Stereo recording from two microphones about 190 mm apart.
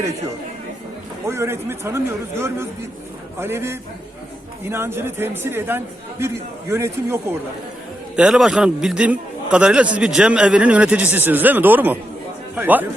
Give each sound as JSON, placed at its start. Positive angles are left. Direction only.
{"t": 1.3, "sound": "a man's voice", "side_deg": -15}